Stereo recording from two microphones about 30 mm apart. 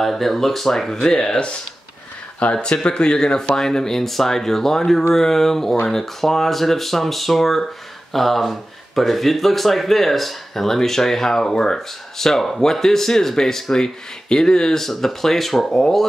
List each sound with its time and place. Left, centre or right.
0.0 s speech: centre; by 1.4 s left
2.5 s speech: left
14.8 s speech: centre